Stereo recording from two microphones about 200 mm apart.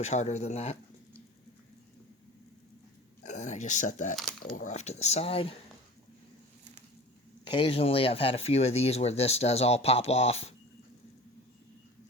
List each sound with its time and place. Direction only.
0.0 s speech: 35° left (ahead or behind)
3.2 s speech: 35° left (ahead or behind)
4.2 s crumpling: centre (ahead or behind)
4.5 s speech: 35° left (ahead or behind)
7.4 s speech: 25° left (ahead or behind)